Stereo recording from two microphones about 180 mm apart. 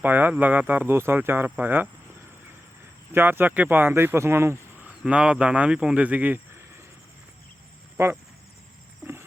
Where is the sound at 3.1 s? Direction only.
10° right (ahead or behind).